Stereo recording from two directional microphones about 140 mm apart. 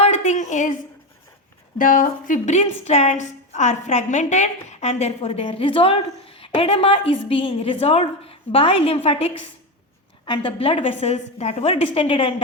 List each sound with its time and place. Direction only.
0.0 s a sound: 55° left (ahead or behind)
1.8 s speech: 75° left (ahead or behind)
2.6 s a woman's voice: 50° left (ahead or behind)